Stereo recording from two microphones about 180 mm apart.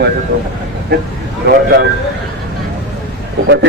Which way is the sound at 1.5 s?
65° right (ahead or behind).